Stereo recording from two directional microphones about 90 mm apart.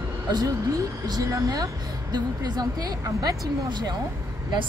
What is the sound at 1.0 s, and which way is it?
A woman's voice, 45° right (ahead or behind).